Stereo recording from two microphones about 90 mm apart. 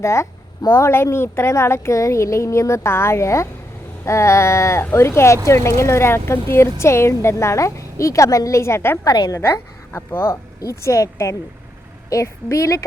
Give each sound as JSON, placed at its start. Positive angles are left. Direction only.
{"t": 0.0, "sound": "a woman's voice", "side_deg": 35}
{"t": 9.0, "sound": "a woman's voice", "side_deg": 55}
{"t": 9.4, "sound": "a woman's voice", "side_deg": 25}